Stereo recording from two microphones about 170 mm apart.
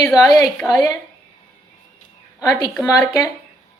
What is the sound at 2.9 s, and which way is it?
Speech, 20° left (ahead or behind).